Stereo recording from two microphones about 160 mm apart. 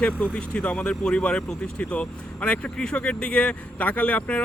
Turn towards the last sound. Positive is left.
turn(degrees=10)  # may be behind; listen again after turning